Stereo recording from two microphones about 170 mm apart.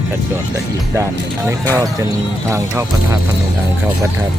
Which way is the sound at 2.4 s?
15° right (ahead or behind).